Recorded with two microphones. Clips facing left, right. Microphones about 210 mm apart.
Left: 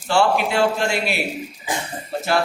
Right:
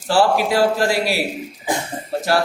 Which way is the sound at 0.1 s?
35° right (ahead or behind).